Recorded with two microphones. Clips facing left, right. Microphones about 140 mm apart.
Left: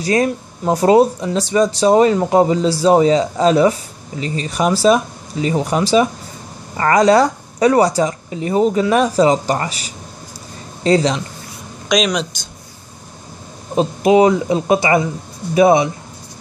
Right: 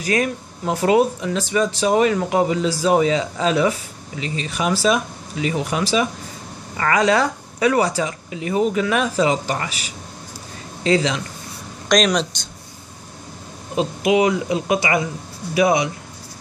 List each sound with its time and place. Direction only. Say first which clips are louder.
0.0 s speech: left 5 dB; 35° left (ahead or behind)
11.9 s speech: even; centre (ahead or behind)
13.7 s speech: left 5 dB; 35° left (ahead or behind)